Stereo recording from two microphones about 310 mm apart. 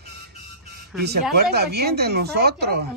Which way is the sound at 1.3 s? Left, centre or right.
Right.